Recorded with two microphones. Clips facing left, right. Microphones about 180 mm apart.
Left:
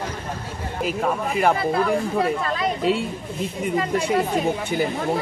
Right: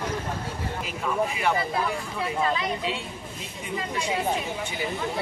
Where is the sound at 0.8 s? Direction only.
50° left (ahead or behind).